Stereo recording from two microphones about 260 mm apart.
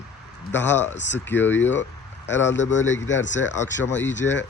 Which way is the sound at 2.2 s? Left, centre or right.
Left.